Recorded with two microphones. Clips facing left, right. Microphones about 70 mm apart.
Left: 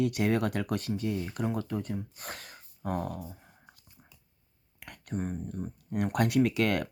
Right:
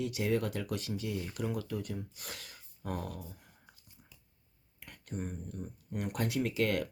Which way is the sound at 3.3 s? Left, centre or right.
Left.